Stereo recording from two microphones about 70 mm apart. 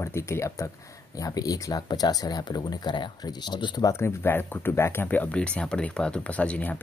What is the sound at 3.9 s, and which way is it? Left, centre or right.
Speech, left.